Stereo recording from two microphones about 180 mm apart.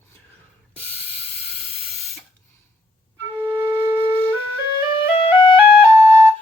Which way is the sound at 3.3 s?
10° right (ahead or behind).